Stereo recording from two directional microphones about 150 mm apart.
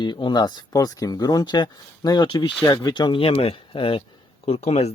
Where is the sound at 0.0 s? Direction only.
30° left (ahead or behind).